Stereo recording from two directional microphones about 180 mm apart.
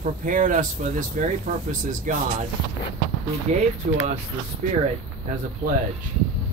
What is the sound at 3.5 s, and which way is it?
Speech, 40° right (ahead or behind).